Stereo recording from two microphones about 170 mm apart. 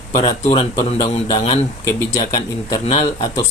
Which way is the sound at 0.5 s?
35° left (ahead or behind).